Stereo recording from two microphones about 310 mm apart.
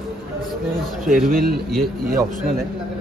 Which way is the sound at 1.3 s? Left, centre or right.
Right.